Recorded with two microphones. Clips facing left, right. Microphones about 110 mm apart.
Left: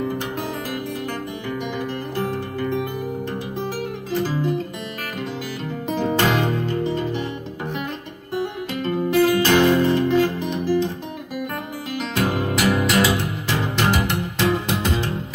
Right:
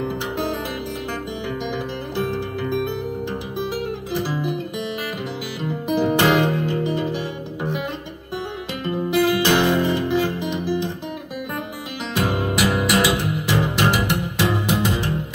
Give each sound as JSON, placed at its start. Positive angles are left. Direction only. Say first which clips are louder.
{"t": 4.1, "sound": "music", "louder": "left 3 dB", "side_deg": -15}
{"t": 5.9, "sound": "music", "louder": "right 3 dB", "side_deg": -15}
{"t": 8.8, "sound": "music", "louder": "left 1 dB", "side_deg": -15}
{"t": 12.3, "sound": "music", "louder": "even", "side_deg": -15}